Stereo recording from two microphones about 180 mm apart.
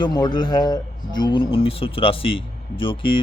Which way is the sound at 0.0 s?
25° left (ahead or behind).